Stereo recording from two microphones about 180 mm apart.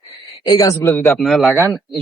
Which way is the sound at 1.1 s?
Centre (ahead or behind).